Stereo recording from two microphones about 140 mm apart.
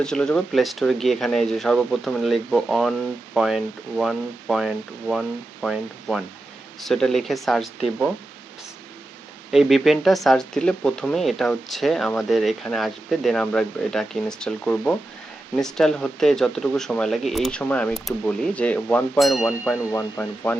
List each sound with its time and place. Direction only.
0.0 s speech: 5° left (ahead or behind)
9.5 s speech: centre (ahead or behind)
19.2 s speech: centre (ahead or behind)
19.8 s speech: 20° left (ahead or behind)